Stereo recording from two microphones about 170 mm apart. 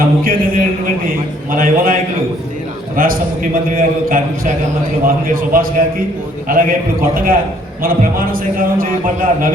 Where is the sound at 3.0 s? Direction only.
55° right (ahead or behind).